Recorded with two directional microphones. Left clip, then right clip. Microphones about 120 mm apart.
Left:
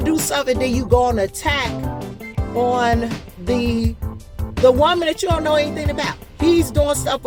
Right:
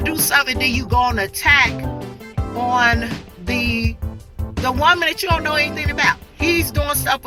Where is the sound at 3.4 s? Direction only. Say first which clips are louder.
Even; 40° left (ahead or behind).